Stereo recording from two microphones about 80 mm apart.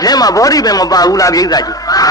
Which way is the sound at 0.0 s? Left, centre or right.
Left.